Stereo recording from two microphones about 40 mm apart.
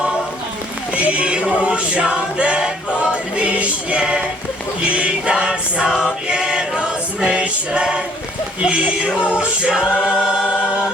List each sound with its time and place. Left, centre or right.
0.9 s choir: right